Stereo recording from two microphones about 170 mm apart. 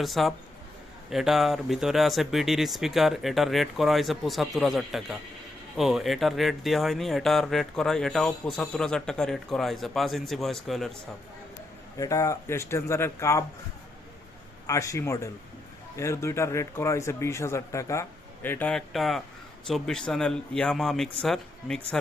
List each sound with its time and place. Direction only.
0.0 s speech: centre (ahead or behind)
11.9 s speech: 20° left (ahead or behind)
14.7 s a man's voice: 20° left (ahead or behind); by 21.9 s centre (ahead or behind)